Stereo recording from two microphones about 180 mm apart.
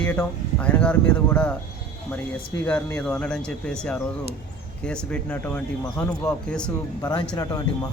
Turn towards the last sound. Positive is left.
turn(degrees=20)  # may be behind; listen again after turning